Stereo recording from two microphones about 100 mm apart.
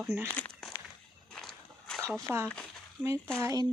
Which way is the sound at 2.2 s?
25° right (ahead or behind).